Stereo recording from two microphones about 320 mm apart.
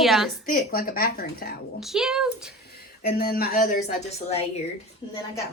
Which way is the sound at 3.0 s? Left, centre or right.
Left.